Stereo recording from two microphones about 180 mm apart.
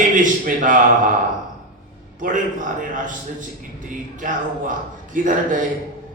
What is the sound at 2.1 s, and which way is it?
A man's voice, 45° right (ahead or behind).